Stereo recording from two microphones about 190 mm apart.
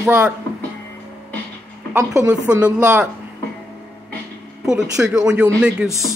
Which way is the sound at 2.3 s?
20° right (ahead or behind).